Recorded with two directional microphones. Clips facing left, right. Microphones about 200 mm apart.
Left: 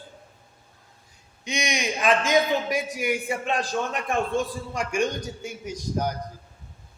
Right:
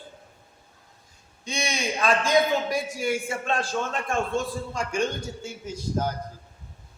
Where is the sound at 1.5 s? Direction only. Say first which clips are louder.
Left 1 dB; 15° left (ahead or behind).